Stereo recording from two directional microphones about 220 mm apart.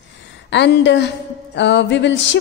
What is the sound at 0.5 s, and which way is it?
Music, 55° left (ahead or behind).